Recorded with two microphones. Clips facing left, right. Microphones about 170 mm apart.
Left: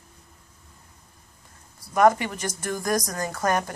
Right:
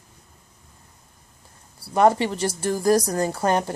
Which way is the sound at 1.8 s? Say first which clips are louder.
Right 1 dB; 30° right (ahead or behind).